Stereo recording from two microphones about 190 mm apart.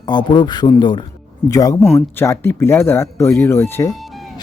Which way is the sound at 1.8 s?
5° left (ahead or behind).